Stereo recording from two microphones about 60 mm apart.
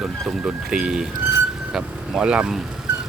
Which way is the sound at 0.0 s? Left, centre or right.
Centre.